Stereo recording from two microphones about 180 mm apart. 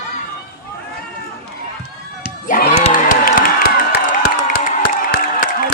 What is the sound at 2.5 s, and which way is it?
Music, 50° left (ahead or behind).